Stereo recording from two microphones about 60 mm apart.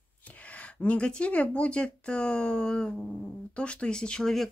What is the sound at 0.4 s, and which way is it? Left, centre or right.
Speech, left.